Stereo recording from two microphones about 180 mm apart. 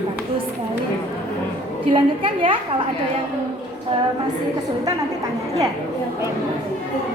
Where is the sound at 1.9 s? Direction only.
30° right (ahead or behind).